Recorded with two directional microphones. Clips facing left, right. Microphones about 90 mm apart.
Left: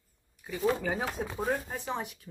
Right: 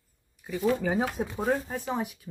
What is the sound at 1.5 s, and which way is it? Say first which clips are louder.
Speech: right 5 dB; 5° right (ahead or behind).